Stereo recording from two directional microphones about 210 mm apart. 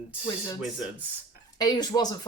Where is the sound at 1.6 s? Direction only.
20° left (ahead or behind).